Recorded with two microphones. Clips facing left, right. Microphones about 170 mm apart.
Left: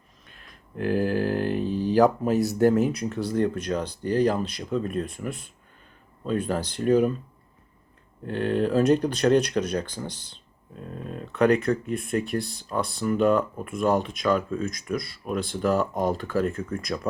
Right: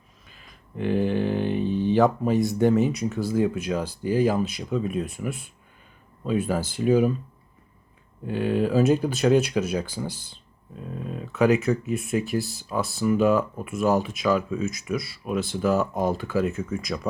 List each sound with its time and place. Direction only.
0.3 s speech: centre (ahead or behind)
8.2 s speech: 5° right (ahead or behind)